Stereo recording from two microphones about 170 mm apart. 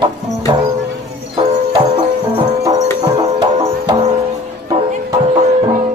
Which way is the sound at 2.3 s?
20° right (ahead or behind).